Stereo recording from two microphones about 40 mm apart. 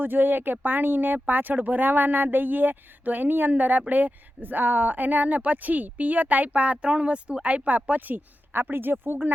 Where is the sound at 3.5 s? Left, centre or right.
Right.